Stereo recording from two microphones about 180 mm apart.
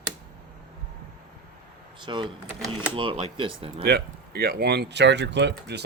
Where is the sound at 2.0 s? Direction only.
25° right (ahead or behind).